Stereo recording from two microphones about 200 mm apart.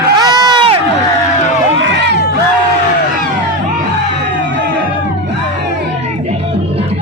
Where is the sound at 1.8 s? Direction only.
60° right (ahead or behind).